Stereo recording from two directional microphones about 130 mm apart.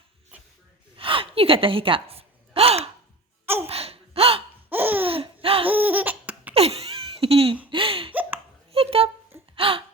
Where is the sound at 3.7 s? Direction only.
50° right (ahead or behind).